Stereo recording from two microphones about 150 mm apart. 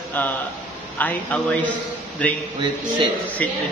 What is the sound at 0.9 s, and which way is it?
Music, 10° left (ahead or behind).